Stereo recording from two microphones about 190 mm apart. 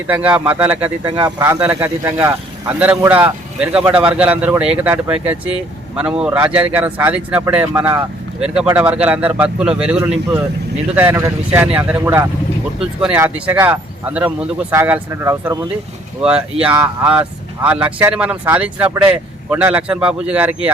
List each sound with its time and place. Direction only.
0.1 s a man's voice: 5° right (ahead or behind)
1.0 s speech: 20° right (ahead or behind)
1.5 s a man's voice: 10° right (ahead or behind)